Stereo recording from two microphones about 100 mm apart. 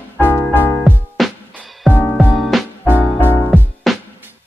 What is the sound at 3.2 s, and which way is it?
Music, 20° left (ahead or behind).